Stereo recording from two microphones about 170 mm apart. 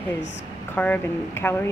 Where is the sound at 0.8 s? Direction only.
10° left (ahead or behind).